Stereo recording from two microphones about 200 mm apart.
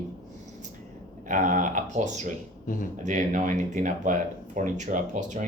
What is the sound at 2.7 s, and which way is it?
Speech, 40° left (ahead or behind).